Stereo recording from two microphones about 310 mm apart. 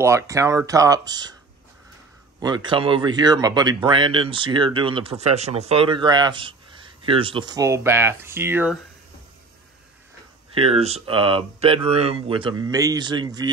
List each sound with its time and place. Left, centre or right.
0.0 s speech: centre
2.4 s speech: centre
10.5 s speech: centre